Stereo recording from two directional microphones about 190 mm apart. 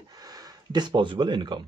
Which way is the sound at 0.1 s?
20° right (ahead or behind).